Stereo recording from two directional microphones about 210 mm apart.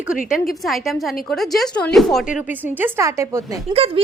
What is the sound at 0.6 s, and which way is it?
Speech, centre (ahead or behind).